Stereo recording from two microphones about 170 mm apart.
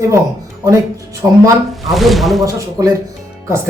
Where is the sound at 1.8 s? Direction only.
Centre (ahead or behind).